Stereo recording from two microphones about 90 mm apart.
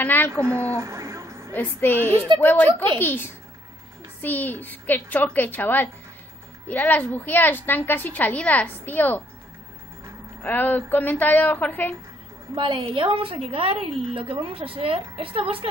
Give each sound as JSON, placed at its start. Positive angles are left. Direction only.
{"t": 0.0, "sound": "a sound", "side_deg": 20}
{"t": 0.3, "sound": "a woman's voice", "side_deg": -30}
{"t": 1.5, "sound": "a woman's voice", "side_deg": 20}
{"t": 10.4, "sound": "a woman's voice", "side_deg": 20}
{"t": 12.5, "sound": "a woman's voice", "side_deg": -65}